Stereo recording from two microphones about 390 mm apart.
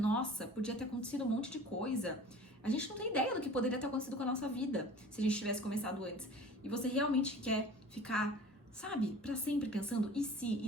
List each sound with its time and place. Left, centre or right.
0.0 s a woman's voice: centre